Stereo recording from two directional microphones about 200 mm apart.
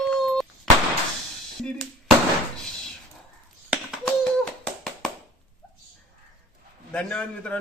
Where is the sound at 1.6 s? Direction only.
Centre (ahead or behind).